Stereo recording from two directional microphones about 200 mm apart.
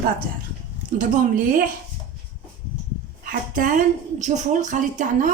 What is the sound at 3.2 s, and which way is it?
A woman's voice, 40° right (ahead or behind).